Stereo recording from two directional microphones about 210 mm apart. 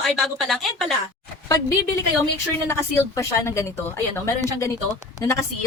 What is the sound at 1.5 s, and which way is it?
A woman's voice, 15° left (ahead or behind).